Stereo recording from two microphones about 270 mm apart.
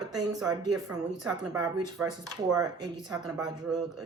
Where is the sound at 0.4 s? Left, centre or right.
Centre.